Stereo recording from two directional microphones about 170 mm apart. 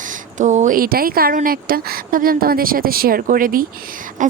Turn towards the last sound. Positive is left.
turn(degrees=-50)  # may be behind; listen again after turning